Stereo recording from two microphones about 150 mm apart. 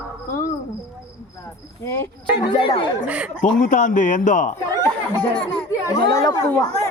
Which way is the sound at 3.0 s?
10° right (ahead or behind).